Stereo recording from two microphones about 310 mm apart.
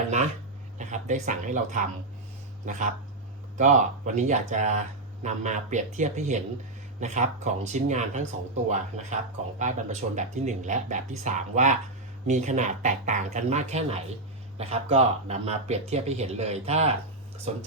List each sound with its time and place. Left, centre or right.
0.8 s speech: right